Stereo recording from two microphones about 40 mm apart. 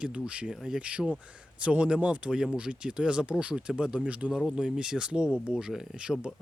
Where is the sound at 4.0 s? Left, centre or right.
Left.